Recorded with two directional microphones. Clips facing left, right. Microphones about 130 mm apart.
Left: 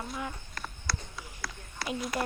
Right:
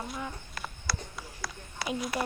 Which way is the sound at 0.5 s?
5° right (ahead or behind).